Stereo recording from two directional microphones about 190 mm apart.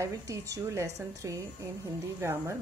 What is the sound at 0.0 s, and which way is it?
Speech, 15° right (ahead or behind).